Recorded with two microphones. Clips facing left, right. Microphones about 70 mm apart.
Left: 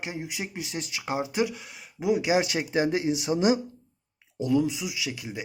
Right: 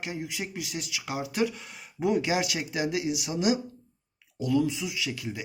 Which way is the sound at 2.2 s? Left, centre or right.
Left.